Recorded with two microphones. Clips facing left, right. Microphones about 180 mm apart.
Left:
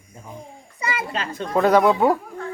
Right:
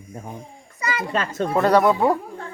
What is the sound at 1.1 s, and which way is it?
Speech, 45° right (ahead or behind).